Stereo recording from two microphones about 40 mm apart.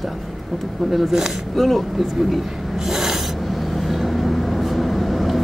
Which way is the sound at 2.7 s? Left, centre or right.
Centre.